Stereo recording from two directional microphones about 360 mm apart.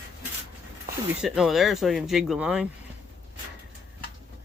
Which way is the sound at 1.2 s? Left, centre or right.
Centre.